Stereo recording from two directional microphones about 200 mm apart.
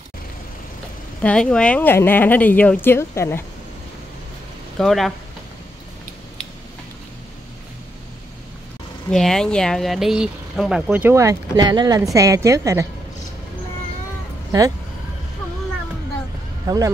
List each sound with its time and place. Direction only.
1.2 s a woman's voice: 5° left (ahead or behind)
4.7 s speech: centre (ahead or behind)
9.1 s speech: 5° left (ahead or behind); by 12.8 s 15° right (ahead or behind)
16.6 s speech: 15° right (ahead or behind)